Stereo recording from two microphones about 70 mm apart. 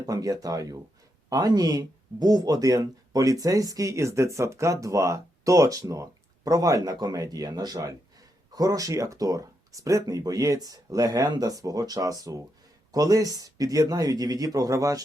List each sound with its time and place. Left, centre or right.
0.0 s speech: right
8.5 s speech: right